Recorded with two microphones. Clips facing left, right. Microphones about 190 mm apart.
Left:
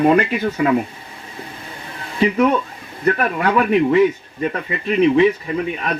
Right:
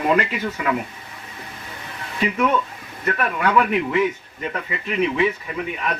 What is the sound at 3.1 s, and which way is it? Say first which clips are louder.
Speech: left 4 dB; 35° left (ahead or behind).